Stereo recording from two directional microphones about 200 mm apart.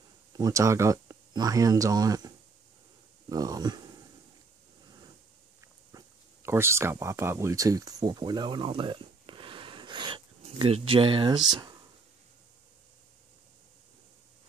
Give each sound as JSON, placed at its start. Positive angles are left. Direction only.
{"t": 0.3, "sound": "speech", "side_deg": -15}
{"t": 5.9, "sound": "speech", "side_deg": -15}